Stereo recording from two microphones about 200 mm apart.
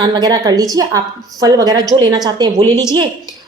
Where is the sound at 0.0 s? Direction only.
20° right (ahead or behind).